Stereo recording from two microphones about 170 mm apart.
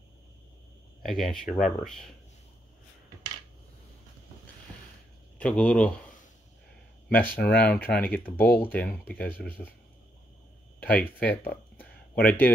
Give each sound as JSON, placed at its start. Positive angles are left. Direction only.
{"t": 1.0, "sound": "speech", "side_deg": 0}
{"t": 5.4, "sound": "speech", "side_deg": 10}
{"t": 7.1, "sound": "speech", "side_deg": 10}
{"t": 10.8, "sound": "speech", "side_deg": 10}